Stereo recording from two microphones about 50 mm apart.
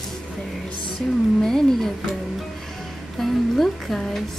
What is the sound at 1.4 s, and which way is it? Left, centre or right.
Speech, centre.